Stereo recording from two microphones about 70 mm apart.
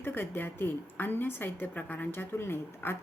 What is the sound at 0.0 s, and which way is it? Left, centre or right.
A woman's voice, left.